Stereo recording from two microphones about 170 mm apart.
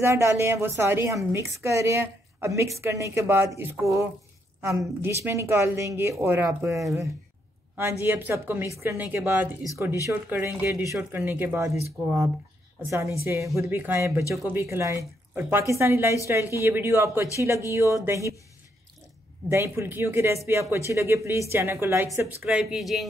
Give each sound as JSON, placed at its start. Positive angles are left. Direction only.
{"t": 0.0, "sound": "speech", "side_deg": -15}
{"t": 12.8, "sound": "speech", "side_deg": -15}
{"t": 19.5, "sound": "speech", "side_deg": -15}
{"t": 22.5, "sound": "speech", "side_deg": -5}